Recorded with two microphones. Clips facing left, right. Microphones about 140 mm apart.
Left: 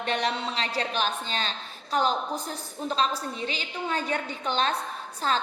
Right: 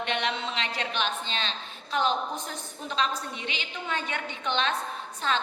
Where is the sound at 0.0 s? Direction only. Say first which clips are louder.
Left 2 dB; 40° left (ahead or behind).